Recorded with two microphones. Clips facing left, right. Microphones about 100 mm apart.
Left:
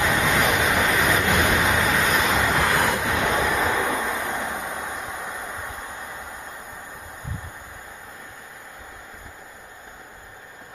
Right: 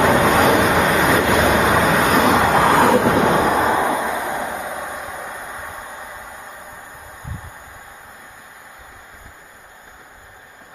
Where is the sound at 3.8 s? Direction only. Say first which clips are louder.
Right 5 dB; 20° right (ahead or behind).